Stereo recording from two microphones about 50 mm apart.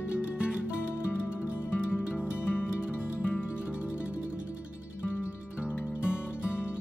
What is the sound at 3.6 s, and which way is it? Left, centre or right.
Music, right.